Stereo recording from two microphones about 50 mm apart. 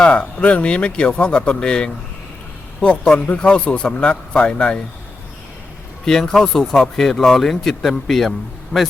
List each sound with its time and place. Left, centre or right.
0.0 s speech: left
6.1 s speech: centre
8.7 s speech: left